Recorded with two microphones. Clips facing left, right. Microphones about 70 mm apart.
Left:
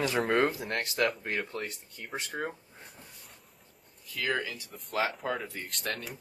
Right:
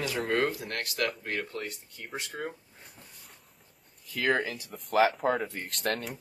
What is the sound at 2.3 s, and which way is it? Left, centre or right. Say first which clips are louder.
Speech: left 3 dB; centre.